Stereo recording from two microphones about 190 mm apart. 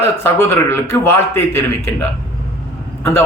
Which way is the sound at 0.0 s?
10° left (ahead or behind).